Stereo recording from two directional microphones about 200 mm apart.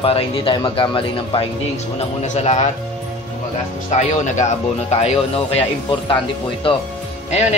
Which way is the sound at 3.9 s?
35° left (ahead or behind).